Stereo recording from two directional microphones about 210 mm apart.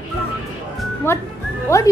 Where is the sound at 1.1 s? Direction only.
10° left (ahead or behind).